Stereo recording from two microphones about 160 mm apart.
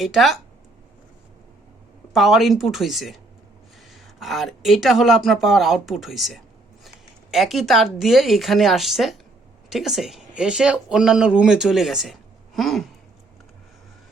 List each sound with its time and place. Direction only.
0.0 s speech: centre (ahead or behind)
2.1 s speech: centre (ahead or behind)